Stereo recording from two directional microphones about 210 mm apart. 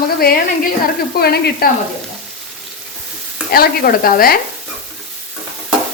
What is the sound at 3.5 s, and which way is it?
Stir, 45° left (ahead or behind).